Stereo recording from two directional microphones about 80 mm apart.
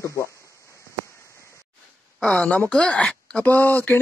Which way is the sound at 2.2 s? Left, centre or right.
Centre.